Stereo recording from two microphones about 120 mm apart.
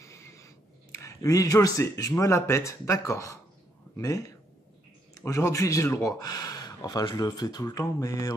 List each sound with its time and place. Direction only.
0.0 s a sound: 25° left (ahead or behind)
0.9 s speech: 25° left (ahead or behind)
6.2 s speech: 35° left (ahead or behind)